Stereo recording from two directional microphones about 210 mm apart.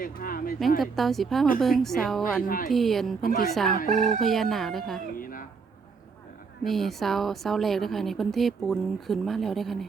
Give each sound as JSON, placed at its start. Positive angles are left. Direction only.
{"t": 0.0, "sound": "speech", "side_deg": 45}
{"t": 0.8, "sound": "speech", "side_deg": 0}
{"t": 2.4, "sound": "speech", "side_deg": 40}
{"t": 2.7, "sound": "speech", "side_deg": 0}
{"t": 3.2, "sound": "speech", "side_deg": 45}
{"t": 3.8, "sound": "chicken", "side_deg": -40}
{"t": 4.2, "sound": "speech", "side_deg": 0}
{"t": 5.1, "sound": "a sound", "side_deg": 40}
{"t": 6.7, "sound": "speech", "side_deg": 0}